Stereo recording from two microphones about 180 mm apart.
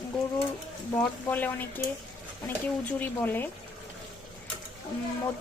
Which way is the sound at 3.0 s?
10° left (ahead or behind).